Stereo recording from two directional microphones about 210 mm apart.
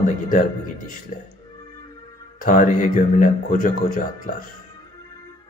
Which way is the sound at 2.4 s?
40° left (ahead or behind).